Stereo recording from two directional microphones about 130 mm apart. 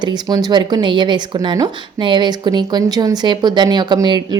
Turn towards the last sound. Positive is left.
turn(degrees=-35)  # may be behind; listen again after turning